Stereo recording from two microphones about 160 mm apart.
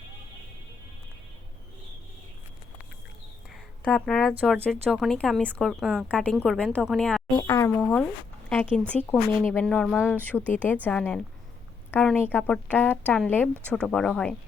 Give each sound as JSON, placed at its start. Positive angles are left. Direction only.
{"t": 3.5, "sound": "a woman's voice", "side_deg": 5}
{"t": 7.3, "sound": "speech", "side_deg": 20}